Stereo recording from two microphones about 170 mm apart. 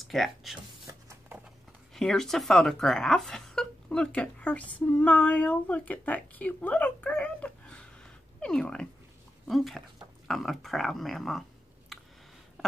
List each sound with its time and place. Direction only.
0.0 s speech: centre (ahead or behind)
0.8 s a sound: 20° right (ahead or behind)
2.0 s speech: 5° left (ahead or behind)